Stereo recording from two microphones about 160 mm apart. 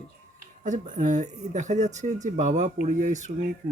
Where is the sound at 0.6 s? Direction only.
50° right (ahead or behind).